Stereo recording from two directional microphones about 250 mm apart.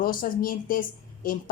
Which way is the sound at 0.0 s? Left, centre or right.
Left.